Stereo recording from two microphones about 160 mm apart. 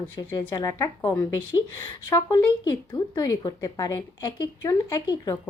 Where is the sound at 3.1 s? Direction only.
25° left (ahead or behind).